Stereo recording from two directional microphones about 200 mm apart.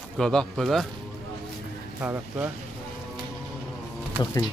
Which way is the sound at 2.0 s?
10° right (ahead or behind).